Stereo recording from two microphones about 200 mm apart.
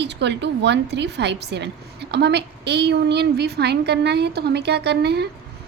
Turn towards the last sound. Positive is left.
turn(degrees=-55)  # may be behind; listen again after turning